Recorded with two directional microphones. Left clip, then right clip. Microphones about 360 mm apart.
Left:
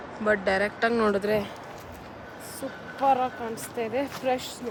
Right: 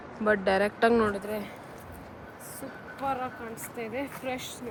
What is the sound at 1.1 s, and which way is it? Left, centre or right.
Speech, left.